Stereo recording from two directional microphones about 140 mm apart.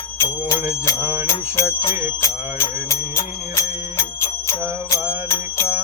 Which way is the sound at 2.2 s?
20° left (ahead or behind).